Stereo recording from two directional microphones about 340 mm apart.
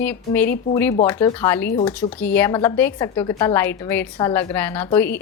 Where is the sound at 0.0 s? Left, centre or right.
Centre.